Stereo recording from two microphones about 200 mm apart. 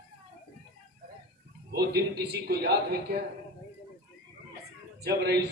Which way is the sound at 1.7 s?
50° right (ahead or behind).